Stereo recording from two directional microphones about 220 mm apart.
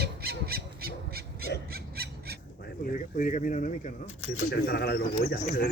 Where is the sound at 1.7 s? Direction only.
45° right (ahead or behind).